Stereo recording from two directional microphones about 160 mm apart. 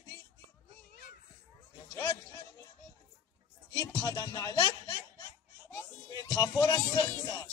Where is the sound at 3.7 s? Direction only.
25° left (ahead or behind).